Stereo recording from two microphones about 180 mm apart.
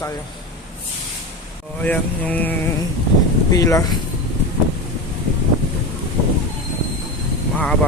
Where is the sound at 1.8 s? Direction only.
10° left (ahead or behind).